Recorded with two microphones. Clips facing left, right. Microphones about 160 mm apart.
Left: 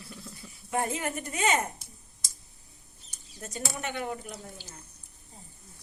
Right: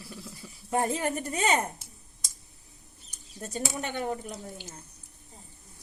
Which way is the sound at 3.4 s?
35° right (ahead or behind).